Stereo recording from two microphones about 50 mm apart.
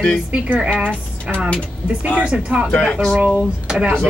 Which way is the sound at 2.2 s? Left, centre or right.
Right.